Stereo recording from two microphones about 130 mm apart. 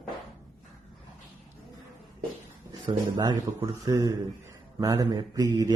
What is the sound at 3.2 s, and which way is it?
A man's voice, 30° right (ahead or behind).